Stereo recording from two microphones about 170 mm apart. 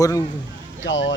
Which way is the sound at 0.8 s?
90° left.